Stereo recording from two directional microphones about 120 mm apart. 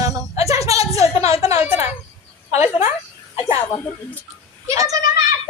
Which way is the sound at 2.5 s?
65° left (ahead or behind).